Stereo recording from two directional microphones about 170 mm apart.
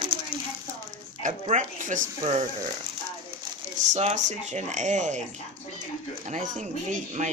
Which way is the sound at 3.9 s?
40° right (ahead or behind).